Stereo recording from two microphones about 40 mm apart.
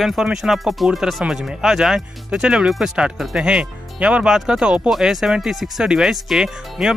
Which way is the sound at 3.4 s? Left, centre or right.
Right.